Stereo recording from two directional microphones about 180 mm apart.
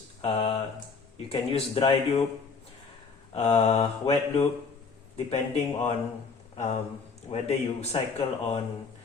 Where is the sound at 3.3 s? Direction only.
35° left (ahead or behind).